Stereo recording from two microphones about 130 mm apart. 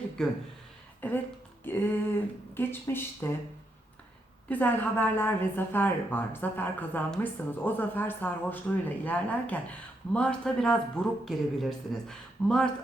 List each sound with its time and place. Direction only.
0.2 s a woman's voice: 5° left (ahead or behind)
4.4 s a woman's voice: 15° left (ahead or behind)